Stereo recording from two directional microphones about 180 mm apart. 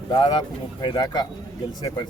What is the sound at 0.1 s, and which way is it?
Speech, 25° left (ahead or behind).